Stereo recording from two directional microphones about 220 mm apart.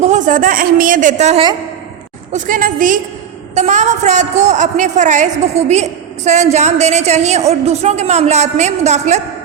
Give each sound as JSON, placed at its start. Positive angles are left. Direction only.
{"t": 0.0, "sound": "a woman's voice", "side_deg": -35}